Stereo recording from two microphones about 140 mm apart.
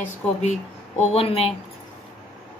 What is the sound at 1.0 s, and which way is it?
Speech, 45° left (ahead or behind).